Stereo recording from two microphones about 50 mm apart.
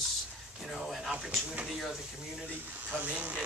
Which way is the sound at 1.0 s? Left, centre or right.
Centre.